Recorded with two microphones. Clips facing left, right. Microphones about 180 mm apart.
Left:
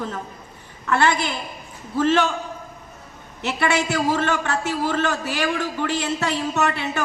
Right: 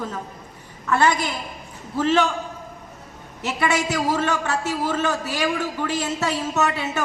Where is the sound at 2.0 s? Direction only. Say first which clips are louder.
Left 1 dB; centre (ahead or behind).